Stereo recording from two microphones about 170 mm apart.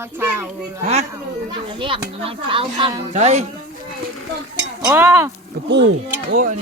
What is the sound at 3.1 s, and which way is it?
Speech, 40° right (ahead or behind).